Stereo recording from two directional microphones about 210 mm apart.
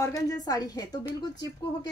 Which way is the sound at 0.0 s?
15° left (ahead or behind).